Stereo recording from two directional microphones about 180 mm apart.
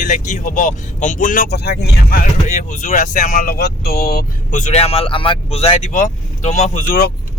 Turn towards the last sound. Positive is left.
turn(degrees=45)  # may be behind; listen again after turning